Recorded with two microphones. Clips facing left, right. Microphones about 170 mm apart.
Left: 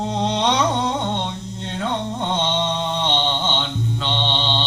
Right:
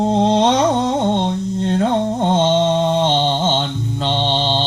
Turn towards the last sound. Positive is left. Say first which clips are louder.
# right 5 dB
turn(degrees=-40)  # may be behind; listen again after turning